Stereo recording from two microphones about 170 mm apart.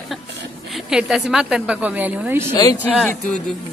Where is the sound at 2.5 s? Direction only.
20° left (ahead or behind).